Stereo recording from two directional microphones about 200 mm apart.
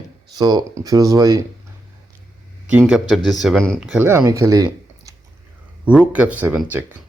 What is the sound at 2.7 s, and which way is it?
Speech, 5° right (ahead or behind).